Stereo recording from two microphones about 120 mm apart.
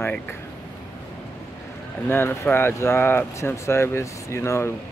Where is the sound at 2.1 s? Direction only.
20° left (ahead or behind).